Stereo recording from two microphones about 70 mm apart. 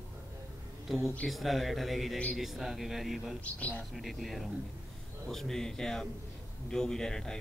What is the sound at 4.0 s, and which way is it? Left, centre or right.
A man's voice, centre.